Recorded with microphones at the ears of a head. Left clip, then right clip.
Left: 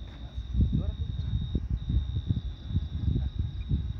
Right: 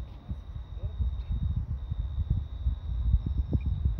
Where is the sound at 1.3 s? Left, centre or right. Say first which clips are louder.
Left 5 dB; left.